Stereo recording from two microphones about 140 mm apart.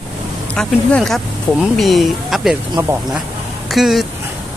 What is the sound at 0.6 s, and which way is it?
Speech, centre (ahead or behind).